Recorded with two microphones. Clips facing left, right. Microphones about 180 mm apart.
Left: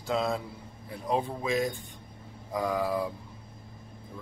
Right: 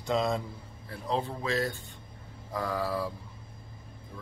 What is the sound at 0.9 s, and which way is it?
Speech, 15° left (ahead or behind).